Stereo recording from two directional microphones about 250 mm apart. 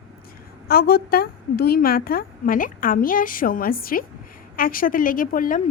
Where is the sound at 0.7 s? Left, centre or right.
Left.